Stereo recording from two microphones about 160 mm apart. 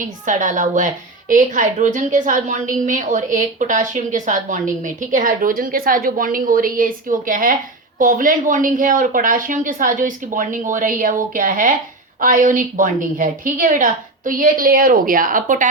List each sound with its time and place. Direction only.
0.0 s a woman's voice: 50° right (ahead or behind)